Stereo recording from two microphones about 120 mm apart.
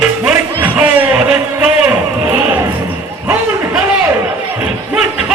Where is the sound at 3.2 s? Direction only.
20° right (ahead or behind).